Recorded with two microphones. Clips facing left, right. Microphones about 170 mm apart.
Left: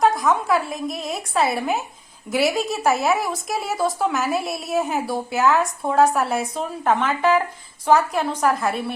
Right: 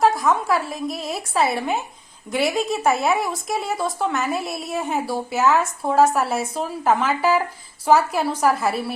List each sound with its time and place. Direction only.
0.0 s a woman's voice: centre (ahead or behind)